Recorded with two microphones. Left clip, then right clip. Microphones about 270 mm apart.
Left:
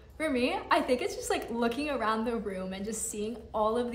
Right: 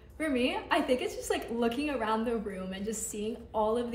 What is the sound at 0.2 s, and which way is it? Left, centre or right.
A woman's voice, centre.